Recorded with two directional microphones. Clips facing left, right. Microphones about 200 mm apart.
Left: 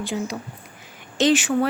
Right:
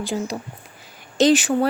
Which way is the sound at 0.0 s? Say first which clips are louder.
Right 1 dB; 40° right (ahead or behind).